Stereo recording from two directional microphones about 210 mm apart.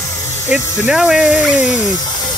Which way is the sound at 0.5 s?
5° right (ahead or behind).